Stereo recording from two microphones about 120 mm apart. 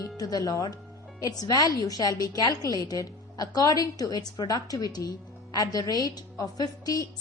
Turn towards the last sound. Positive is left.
turn(degrees=30)  # may be behind; listen again after turning